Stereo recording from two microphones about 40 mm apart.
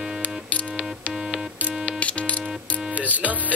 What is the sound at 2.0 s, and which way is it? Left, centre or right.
Music, left.